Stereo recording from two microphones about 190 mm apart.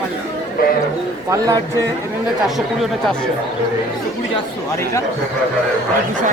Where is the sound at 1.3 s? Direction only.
20° right (ahead or behind).